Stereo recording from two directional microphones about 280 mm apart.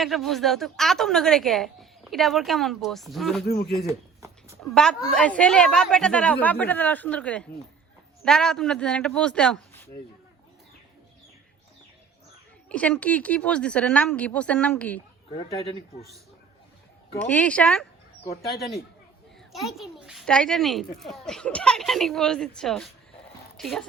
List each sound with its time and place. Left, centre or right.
0.0 s a woman's voice: centre
3.4 s speech: left
4.6 s a woman's voice: centre
12.6 s a woman's voice: centre
15.3 s speech: left
17.2 s a woman's voice: centre
19.5 s a woman's voice: centre